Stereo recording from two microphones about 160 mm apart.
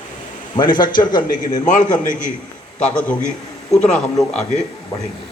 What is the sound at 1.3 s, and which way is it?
Speech, 50° left (ahead or behind).